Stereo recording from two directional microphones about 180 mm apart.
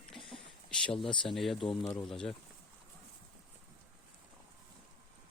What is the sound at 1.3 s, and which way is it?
Speech, centre (ahead or behind).